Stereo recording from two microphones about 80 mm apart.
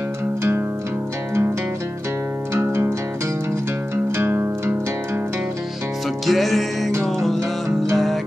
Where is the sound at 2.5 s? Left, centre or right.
Right.